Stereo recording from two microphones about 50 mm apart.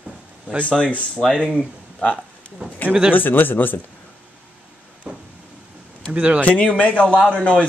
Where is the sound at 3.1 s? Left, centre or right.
Left.